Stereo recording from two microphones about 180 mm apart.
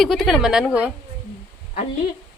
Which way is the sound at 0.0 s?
Centre (ahead or behind).